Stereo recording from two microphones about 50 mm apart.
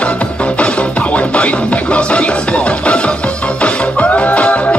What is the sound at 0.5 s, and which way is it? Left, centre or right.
Music, left.